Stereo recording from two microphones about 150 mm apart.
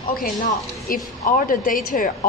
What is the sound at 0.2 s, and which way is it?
A woman's voice, 65° left (ahead or behind).